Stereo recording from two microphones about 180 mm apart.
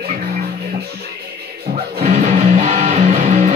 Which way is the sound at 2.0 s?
40° right (ahead or behind).